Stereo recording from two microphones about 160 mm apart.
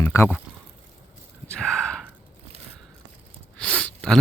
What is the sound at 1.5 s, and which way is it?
Gasp, 5° left (ahead or behind).